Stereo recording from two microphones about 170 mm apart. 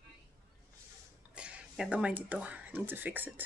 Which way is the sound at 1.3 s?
5° right (ahead or behind).